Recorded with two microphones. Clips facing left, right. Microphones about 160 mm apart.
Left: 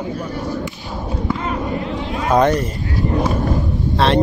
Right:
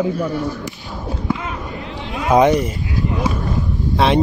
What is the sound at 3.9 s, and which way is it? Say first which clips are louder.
Speech: even; 10° right (ahead or behind).